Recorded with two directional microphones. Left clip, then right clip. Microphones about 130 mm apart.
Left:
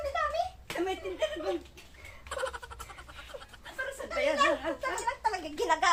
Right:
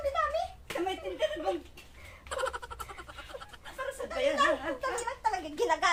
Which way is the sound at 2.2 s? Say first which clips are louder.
Right 2 dB; centre (ahead or behind).